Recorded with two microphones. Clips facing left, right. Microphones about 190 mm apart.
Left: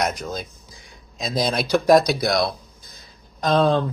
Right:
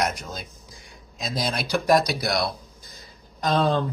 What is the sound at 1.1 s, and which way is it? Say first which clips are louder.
Speech: left 5 dB; 45° left (ahead or behind).